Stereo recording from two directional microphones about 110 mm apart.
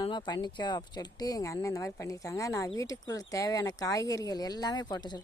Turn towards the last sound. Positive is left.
turn(degrees=40)  # may be behind; listen again after turning